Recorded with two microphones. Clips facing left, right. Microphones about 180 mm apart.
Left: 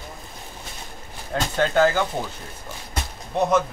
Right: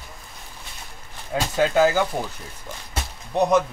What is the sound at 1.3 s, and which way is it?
Speech, 10° right (ahead or behind).